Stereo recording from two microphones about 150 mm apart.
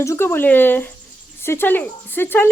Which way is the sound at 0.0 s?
15° left (ahead or behind).